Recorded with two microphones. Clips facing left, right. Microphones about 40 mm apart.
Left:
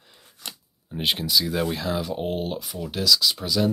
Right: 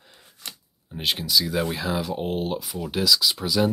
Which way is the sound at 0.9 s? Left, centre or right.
Centre.